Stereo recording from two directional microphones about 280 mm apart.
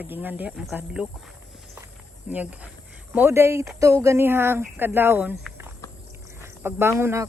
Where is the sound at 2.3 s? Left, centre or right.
Centre.